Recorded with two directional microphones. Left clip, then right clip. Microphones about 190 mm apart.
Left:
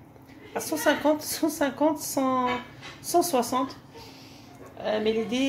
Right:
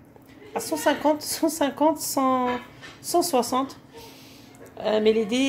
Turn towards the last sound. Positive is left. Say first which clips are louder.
# right 5 dB
turn(degrees=-40)  # may be behind; listen again after turning